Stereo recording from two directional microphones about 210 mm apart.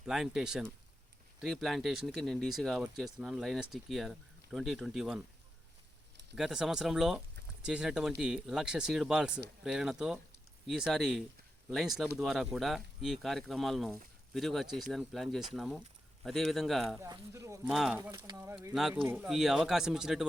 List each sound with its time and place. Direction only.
0.0 s speech: centre (ahead or behind)
6.3 s speech: 5° right (ahead or behind)
17.0 s speech: 15° right (ahead or behind)
17.7 s speech: centre (ahead or behind)
18.1 s speech: 15° right (ahead or behind)
18.7 s speech: centre (ahead or behind)